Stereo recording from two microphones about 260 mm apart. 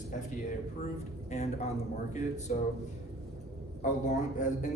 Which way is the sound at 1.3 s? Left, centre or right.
Left.